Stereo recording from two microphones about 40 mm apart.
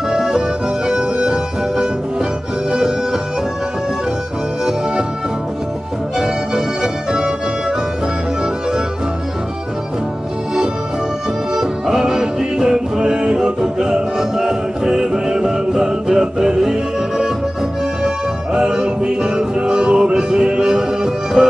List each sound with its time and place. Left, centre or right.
0.1 s music: centre
6.1 s music: centre
11.5 s music: centre
18.0 s music: centre